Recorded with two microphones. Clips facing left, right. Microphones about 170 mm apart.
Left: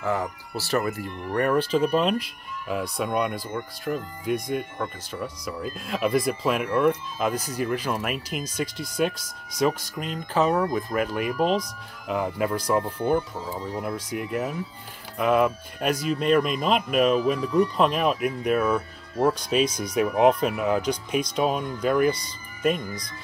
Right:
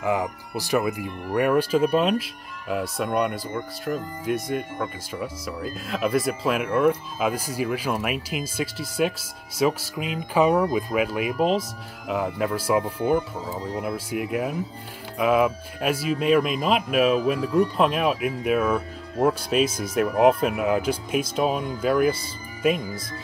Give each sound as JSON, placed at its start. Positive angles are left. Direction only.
{"t": 0.0, "sound": "speech", "side_deg": -15}